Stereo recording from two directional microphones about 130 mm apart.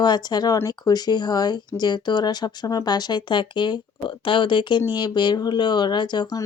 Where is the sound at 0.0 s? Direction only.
35° left (ahead or behind).